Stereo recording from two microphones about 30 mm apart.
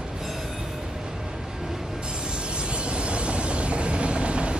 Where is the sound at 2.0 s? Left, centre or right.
Right.